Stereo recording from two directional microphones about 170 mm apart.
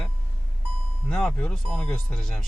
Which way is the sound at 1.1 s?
5° left (ahead or behind).